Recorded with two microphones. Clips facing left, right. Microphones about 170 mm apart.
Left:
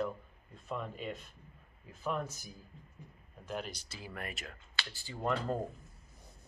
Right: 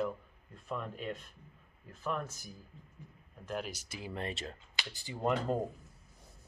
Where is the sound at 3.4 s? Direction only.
Centre (ahead or behind).